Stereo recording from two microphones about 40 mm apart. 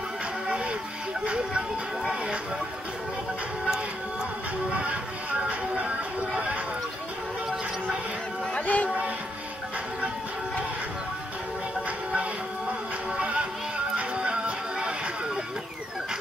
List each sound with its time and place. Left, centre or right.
1.2 s music: right
5.4 s speech: right
8.5 s speech: left
13.2 s music: right